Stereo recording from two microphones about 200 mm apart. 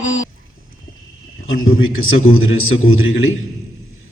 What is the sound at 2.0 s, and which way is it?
A man's voice, 90° left.